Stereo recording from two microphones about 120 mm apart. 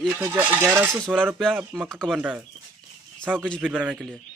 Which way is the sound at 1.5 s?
15° right (ahead or behind).